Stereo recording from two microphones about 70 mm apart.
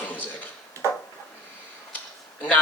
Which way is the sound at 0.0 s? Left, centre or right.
Left.